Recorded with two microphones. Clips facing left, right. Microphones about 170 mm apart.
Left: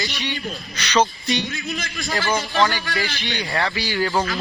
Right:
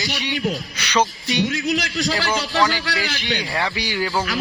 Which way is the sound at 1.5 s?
85° right.